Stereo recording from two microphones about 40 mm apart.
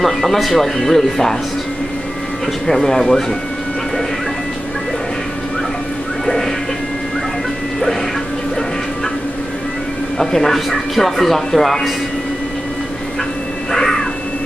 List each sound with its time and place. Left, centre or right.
0.0 s speech: centre
2.6 s speech: centre
6.2 s music: centre
10.1 s speech: centre
13.7 s crow: centre